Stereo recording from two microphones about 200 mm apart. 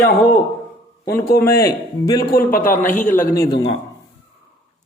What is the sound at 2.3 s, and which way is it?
Speech, 45° left (ahead or behind).